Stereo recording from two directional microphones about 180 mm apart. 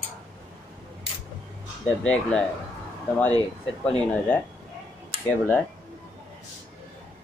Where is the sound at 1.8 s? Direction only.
5° left (ahead or behind).